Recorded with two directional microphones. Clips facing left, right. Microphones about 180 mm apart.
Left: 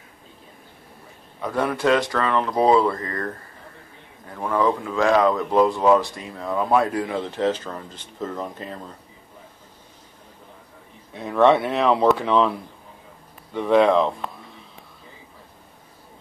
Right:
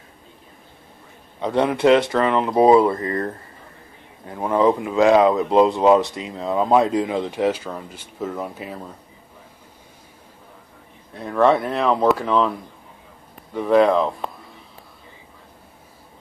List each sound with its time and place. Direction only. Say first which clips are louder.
1.4 s speech: right 5 dB; 20° right (ahead or behind)
11.1 s speech: even; centre (ahead or behind)